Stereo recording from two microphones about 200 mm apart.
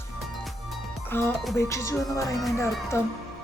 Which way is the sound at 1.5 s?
15° left (ahead or behind).